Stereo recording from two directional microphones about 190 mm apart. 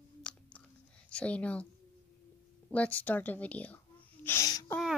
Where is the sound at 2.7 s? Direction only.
10° left (ahead or behind).